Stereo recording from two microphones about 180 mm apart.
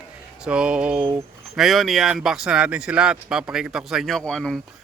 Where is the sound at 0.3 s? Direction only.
5° right (ahead or behind).